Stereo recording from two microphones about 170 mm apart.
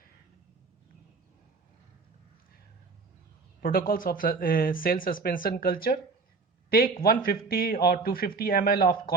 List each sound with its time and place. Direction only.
3.6 s a man's voice: 60° left (ahead or behind)